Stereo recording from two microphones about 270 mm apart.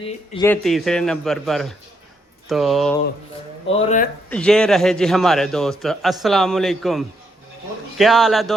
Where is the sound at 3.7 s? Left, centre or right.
Left.